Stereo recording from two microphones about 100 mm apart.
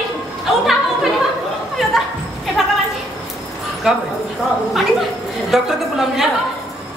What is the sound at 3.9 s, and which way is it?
A woman's voice, 5° right (ahead or behind).